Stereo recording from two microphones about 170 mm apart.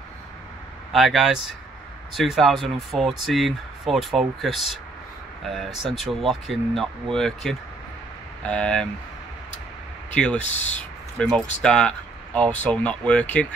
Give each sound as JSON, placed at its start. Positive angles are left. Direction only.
{"t": 0.9, "sound": "speech", "side_deg": 0}
{"t": 10.1, "sound": "speech", "side_deg": 5}
{"t": 10.5, "sound": "speech", "side_deg": 40}
{"t": 11.2, "sound": "speech", "side_deg": 5}